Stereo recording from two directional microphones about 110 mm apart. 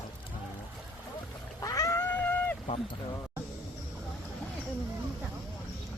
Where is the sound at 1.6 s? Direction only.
30° left (ahead or behind).